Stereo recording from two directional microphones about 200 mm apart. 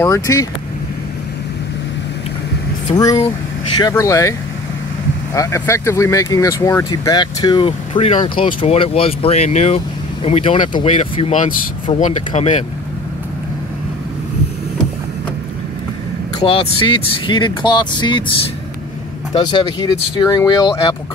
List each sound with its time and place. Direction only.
0.0 s speech: 15° left (ahead or behind)
3.0 s speech: 15° left (ahead or behind); by 12.6 s 35° left (ahead or behind)
16.3 s speech: 25° left (ahead or behind)
19.3 s speech: 20° left (ahead or behind)